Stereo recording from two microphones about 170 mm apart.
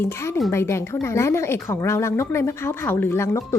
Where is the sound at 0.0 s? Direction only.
15° left (ahead or behind).